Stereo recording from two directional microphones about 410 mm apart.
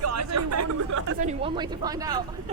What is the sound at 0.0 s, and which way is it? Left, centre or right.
Chatter, right.